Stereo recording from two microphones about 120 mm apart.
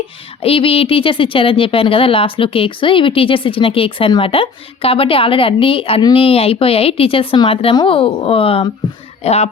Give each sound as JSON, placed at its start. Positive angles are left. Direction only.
{"t": 0.4, "sound": "speech", "side_deg": 50}
{"t": 9.2, "sound": "speech", "side_deg": 60}